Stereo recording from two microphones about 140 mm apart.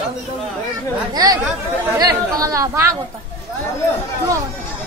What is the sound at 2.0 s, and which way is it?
Speech, 25° right (ahead or behind).